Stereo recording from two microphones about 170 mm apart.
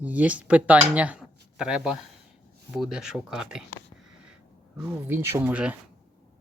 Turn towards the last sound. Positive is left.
turn(degrees=-10)  # may be behind; listen again after turning